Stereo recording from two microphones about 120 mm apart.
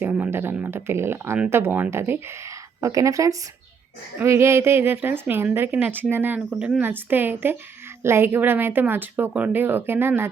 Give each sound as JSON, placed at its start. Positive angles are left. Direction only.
{"t": 0.0, "sound": "a woman's voice", "side_deg": -15}